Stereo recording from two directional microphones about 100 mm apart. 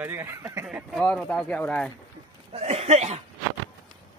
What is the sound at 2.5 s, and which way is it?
Speech, 90° right.